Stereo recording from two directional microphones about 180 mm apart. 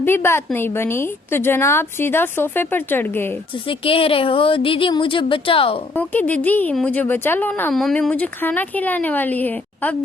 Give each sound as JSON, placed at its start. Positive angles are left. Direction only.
{"t": 0.0, "sound": "speech", "side_deg": 10}
{"t": 3.7, "sound": "speech", "side_deg": 30}
{"t": 5.9, "sound": "speech", "side_deg": 10}